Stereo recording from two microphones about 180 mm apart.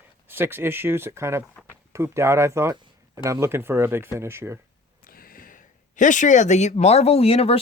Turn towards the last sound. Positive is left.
turn(degrees=35)  # may be behind; listen again after turning